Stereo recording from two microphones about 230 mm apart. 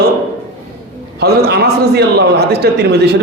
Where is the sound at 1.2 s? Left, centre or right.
Right.